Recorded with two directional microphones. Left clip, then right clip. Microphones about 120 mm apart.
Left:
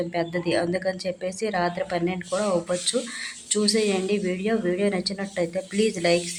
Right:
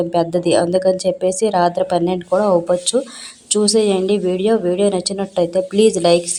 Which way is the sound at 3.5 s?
30° right (ahead or behind).